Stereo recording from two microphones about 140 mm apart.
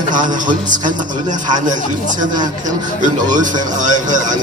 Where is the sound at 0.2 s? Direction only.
65° right (ahead or behind).